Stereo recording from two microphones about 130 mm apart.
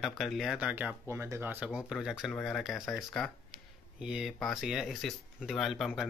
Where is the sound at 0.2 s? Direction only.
Centre (ahead or behind).